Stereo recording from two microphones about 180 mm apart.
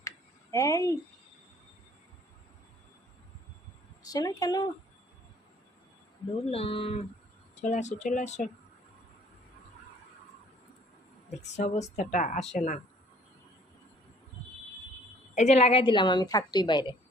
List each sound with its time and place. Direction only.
0.5 s speech: 20° left (ahead or behind)
4.0 s a woman's voice: 20° left (ahead or behind)
6.5 s a woman's voice: 30° left (ahead or behind)
11.3 s a woman's voice: 40° left (ahead or behind)
15.4 s a woman's voice: 35° left (ahead or behind)